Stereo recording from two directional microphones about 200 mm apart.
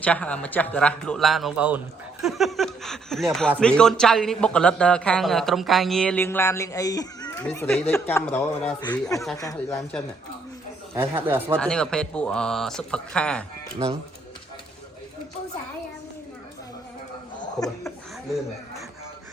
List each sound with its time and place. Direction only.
0.0 s a man's voice: 5° left (ahead or behind)
8.8 s speech: 20° left (ahead or behind)
10.9 s speech: 10° right (ahead or behind)
11.6 s a man's voice: 5° left (ahead or behind)